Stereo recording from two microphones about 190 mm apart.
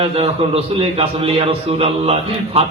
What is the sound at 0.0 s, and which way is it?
A man's voice, 30° right (ahead or behind).